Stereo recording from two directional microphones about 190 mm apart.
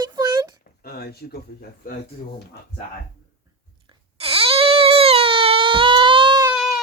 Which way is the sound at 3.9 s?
30° right (ahead or behind).